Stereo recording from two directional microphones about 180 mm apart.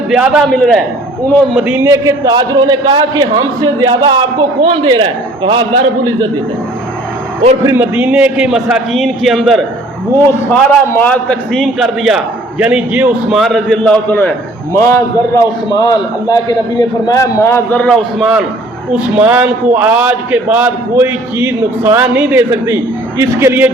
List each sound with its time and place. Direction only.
0.1 s a man's voice: centre (ahead or behind); by 5.6 s 30° right (ahead or behind)
7.6 s a man's voice: 15° right (ahead or behind)